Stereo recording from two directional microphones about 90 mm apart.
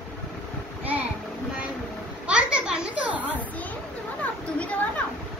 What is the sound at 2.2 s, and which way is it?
Children playing, 10° right (ahead or behind).